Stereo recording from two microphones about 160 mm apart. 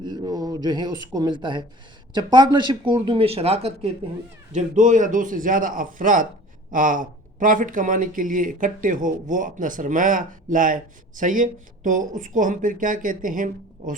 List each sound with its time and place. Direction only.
0.0 s speech: 25° right (ahead or behind)
4.5 s speech: 50° right (ahead or behind)